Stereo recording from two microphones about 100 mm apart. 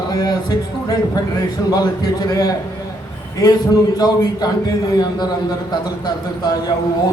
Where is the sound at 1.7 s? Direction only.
40° left (ahead or behind).